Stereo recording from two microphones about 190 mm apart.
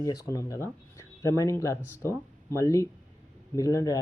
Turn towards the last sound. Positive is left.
turn(degrees=15)  # may be behind; listen again after turning